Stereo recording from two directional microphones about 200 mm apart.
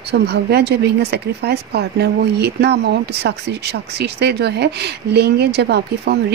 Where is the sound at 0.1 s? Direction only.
55° right (ahead or behind).